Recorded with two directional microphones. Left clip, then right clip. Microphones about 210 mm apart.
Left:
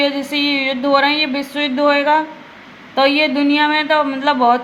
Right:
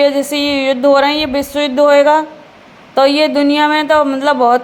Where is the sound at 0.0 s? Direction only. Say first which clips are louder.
Right 5 dB; 50° right (ahead or behind).